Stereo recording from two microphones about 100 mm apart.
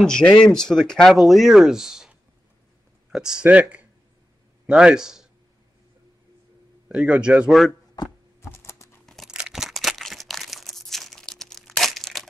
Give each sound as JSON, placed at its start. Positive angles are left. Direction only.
{"t": 0.0, "sound": "a man's voice", "side_deg": 10}
{"t": 6.9, "sound": "a man's voice", "side_deg": -10}
{"t": 8.0, "sound": "a sound", "side_deg": 40}
{"t": 8.4, "sound": "typing", "side_deg": 25}
{"t": 9.0, "sound": "crunch", "side_deg": 5}
{"t": 9.3, "sound": "crumpling", "side_deg": -5}